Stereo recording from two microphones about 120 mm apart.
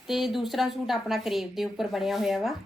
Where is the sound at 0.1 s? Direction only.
Centre (ahead or behind).